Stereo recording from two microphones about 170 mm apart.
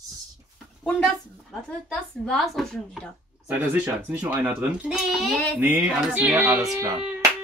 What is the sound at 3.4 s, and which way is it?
A child's voice, 10° right (ahead or behind).